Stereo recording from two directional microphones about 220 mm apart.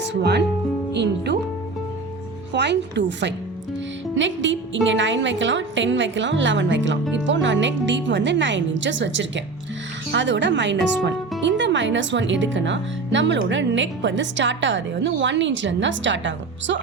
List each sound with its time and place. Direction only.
0.0 s speech: 50° right (ahead or behind)
2.5 s speech: 50° right (ahead or behind)